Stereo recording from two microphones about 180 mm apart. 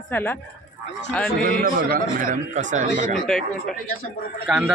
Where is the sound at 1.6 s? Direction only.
50° right (ahead or behind).